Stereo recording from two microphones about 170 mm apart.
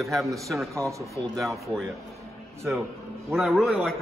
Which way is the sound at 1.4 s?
Centre (ahead or behind).